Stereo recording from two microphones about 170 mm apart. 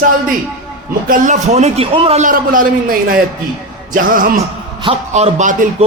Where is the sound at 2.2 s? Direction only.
55° right (ahead or behind).